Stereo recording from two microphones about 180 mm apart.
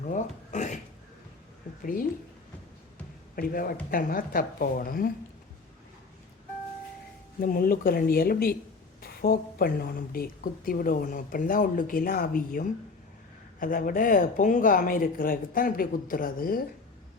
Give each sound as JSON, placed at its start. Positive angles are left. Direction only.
{"t": 0.0, "sound": "a sound", "side_deg": 45}
{"t": 3.3, "sound": "a woman's voice", "side_deg": 55}
{"t": 7.3, "sound": "a woman's voice", "side_deg": 55}